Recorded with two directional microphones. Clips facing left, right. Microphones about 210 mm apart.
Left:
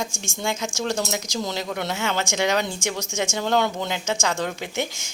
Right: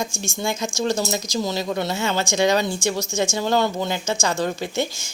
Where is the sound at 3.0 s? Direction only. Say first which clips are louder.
Right 4 dB; 10° left (ahead or behind).